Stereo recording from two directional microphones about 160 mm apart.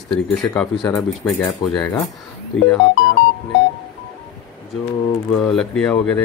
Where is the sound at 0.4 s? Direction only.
15° left (ahead or behind).